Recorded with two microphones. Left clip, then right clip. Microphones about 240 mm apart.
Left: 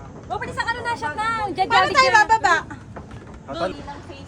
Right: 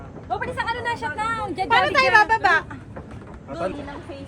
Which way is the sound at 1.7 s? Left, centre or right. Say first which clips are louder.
Left 1 dB; left.